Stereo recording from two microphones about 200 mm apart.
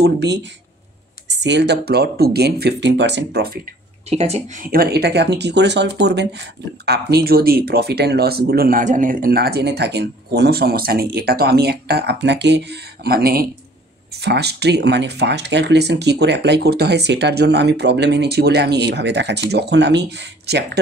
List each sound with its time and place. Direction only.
0.0 s speech: 60° right (ahead or behind)
4.1 s speech: 35° right (ahead or behind)
4.6 s speech: 50° right (ahead or behind)